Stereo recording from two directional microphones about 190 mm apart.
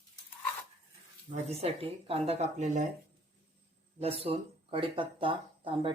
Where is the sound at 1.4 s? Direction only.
30° right (ahead or behind).